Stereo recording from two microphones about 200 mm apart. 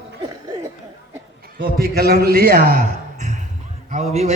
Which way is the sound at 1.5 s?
50° right (ahead or behind).